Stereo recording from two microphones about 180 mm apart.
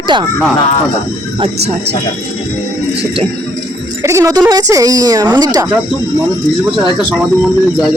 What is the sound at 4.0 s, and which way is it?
Speech, 15° right (ahead or behind).